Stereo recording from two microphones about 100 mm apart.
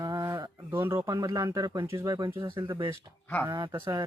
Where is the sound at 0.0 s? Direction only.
35° right (ahead or behind).